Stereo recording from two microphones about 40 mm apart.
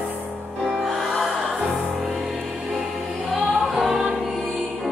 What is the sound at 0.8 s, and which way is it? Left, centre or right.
Music, centre.